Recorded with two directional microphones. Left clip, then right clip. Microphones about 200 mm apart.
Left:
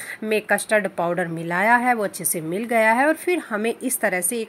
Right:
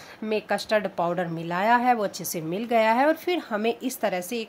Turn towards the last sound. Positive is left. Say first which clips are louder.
# left 4 dB
turn(degrees=5)  # may be behind; listen again after turning